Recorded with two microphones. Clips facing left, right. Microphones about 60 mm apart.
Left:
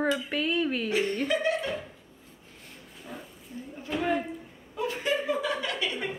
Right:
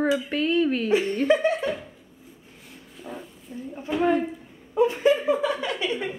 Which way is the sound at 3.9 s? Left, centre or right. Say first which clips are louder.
Right 6 dB; centre.